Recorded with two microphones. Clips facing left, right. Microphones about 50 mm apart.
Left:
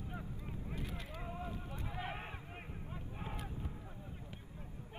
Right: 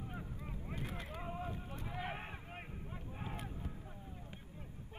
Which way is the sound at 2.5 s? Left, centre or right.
Centre.